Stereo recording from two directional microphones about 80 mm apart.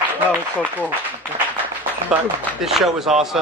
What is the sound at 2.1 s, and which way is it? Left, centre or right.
A man's voice, centre.